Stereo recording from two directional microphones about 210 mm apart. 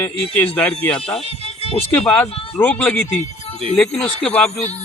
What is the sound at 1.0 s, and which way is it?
Speech, 25° left (ahead or behind).